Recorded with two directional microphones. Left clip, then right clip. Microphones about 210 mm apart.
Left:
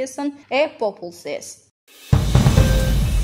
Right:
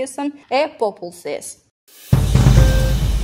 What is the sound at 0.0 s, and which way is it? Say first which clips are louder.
A woman's voice: right 1 dB; 35° right (ahead or behind).